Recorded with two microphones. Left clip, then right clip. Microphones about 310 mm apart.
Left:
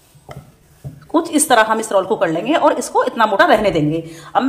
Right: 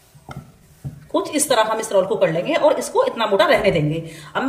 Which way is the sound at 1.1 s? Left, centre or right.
Centre.